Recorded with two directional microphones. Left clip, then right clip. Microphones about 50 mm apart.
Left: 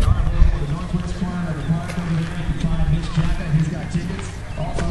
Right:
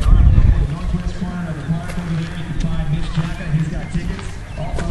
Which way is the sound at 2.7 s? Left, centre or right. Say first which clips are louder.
Even; centre.